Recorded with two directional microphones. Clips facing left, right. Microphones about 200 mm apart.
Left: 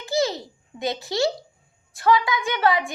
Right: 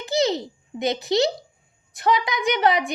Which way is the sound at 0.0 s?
20° right (ahead or behind).